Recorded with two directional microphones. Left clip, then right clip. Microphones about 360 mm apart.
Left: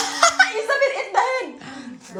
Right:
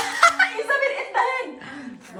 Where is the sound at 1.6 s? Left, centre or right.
Centre.